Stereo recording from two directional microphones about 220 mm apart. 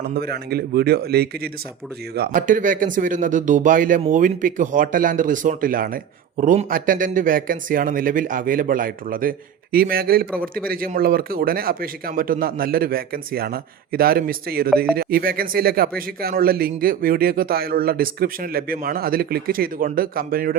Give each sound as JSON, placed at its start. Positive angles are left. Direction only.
{"t": 0.1, "sound": "a man's voice", "side_deg": -45}